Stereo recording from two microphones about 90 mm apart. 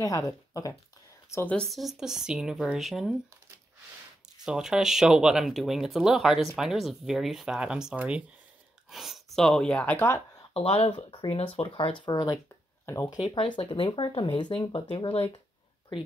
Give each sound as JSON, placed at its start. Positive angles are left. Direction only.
{"t": 0.0, "sound": "speech", "side_deg": 40}
{"t": 1.4, "sound": "speech", "side_deg": 15}
{"t": 1.7, "sound": "speech", "side_deg": 0}
{"t": 4.5, "sound": "speech", "side_deg": -5}
{"t": 8.9, "sound": "speech", "side_deg": 0}
{"t": 10.5, "sound": "speech", "side_deg": 90}
{"t": 12.0, "sound": "speech", "side_deg": 45}
{"t": 12.8, "sound": "speech", "side_deg": 30}
{"t": 13.2, "sound": "speech", "side_deg": 65}